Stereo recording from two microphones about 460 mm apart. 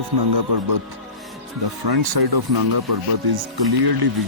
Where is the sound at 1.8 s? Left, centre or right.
Right.